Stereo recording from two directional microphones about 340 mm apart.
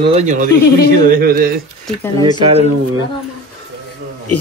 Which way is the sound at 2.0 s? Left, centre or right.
Centre.